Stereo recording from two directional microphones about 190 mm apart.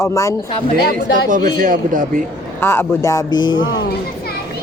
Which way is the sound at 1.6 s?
45° right (ahead or behind).